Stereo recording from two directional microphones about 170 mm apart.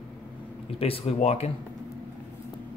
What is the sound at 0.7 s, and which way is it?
Speech, 35° left (ahead or behind).